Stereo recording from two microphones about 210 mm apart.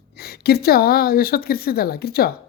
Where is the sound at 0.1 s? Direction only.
50° left (ahead or behind).